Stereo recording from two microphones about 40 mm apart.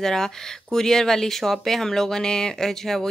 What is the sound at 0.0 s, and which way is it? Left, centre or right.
Speech, centre.